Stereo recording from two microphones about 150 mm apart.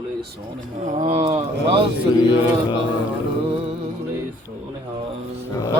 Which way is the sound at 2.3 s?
30° left (ahead or behind).